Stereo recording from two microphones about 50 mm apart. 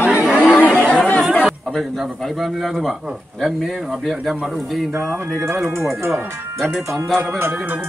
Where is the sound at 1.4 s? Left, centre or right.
Centre.